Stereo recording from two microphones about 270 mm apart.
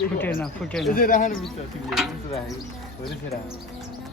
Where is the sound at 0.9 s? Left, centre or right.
Left.